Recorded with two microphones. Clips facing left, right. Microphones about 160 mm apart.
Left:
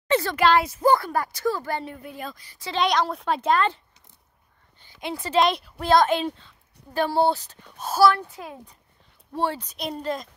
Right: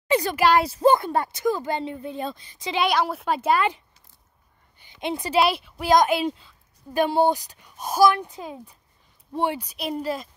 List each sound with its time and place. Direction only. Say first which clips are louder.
0.1 s speech: even; 10° right (ahead or behind)
0.6 s a woman's voice: right 2 dB; 35° right (ahead or behind)
2.8 s a woman's voice: even; 5° right (ahead or behind)
4.7 s a sound: right 4 dB; 20° right (ahead or behind)
5.4 s a woman's voice: left 1 dB; 5° right (ahead or behind)